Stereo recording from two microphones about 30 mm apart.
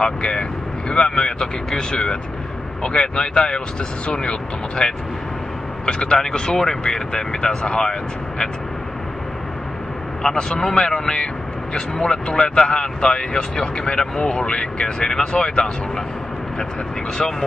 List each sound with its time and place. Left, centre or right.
0.0 s speech: left
10.2 s speech: left